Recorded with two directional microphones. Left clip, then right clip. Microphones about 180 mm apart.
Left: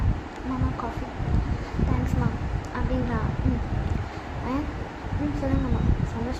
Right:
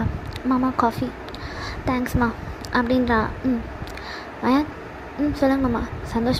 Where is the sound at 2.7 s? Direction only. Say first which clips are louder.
Right 12 dB; 45° right (ahead or behind).